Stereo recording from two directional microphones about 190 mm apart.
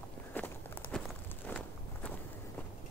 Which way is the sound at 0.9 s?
5° left (ahead or behind).